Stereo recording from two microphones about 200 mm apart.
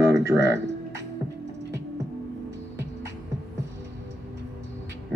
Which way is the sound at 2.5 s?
15° right (ahead or behind).